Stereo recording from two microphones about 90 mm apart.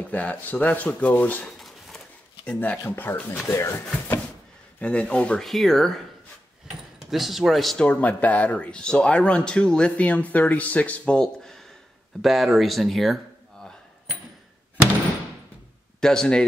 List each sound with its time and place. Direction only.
0.1 s speech: 15° left (ahead or behind)
1.6 s a sound: centre (ahead or behind)
2.4 s speech: 10° left (ahead or behind)
2.8 s speech: 25° left (ahead or behind)
4.7 s speech: 15° left (ahead or behind)
7.1 s speech: centre (ahead or behind)
7.8 s speech: 15° left (ahead or behind)
16.0 s speech: 10° left (ahead or behind)